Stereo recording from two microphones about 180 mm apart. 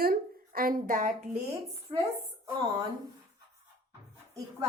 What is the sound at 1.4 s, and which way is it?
A woman's voice, 15° right (ahead or behind).